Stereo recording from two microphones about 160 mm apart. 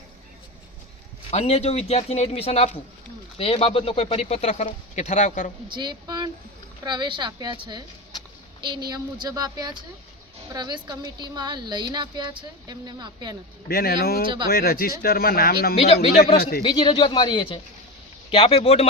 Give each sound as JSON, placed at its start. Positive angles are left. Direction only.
{"t": 1.3, "sound": "speech", "side_deg": 40}
{"t": 5.6, "sound": "a woman's voice", "side_deg": -30}
{"t": 8.9, "sound": "a woman's voice", "side_deg": -25}
{"t": 13.7, "sound": "speech", "side_deg": 75}
{"t": 15.7, "sound": "speech", "side_deg": 40}
{"t": 16.4, "sound": "speech", "side_deg": 70}
{"t": 16.6, "sound": "speech", "side_deg": 30}